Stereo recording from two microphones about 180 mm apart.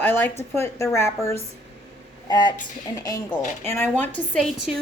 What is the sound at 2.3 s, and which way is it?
Speech, 25° left (ahead or behind).